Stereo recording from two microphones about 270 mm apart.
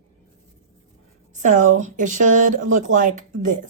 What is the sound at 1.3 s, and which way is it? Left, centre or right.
Speech, right.